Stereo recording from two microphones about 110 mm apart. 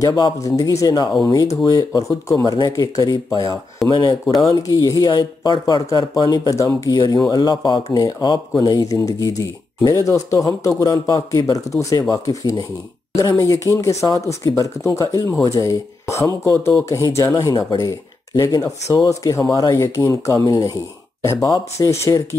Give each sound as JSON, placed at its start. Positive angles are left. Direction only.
{"t": 0.0, "sound": "speech", "side_deg": 35}
{"t": 3.8, "sound": "speech", "side_deg": 0}
{"t": 4.4, "sound": "speech", "side_deg": 30}